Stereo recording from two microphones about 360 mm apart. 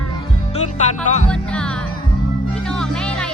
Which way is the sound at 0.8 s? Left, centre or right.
Centre.